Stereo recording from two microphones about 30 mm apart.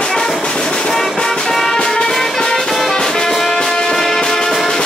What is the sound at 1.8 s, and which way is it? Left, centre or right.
Music, left.